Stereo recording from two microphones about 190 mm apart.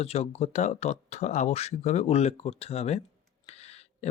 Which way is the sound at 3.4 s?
35° left (ahead or behind).